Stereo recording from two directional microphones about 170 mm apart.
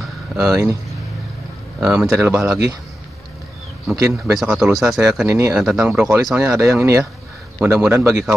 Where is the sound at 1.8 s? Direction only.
5° right (ahead or behind).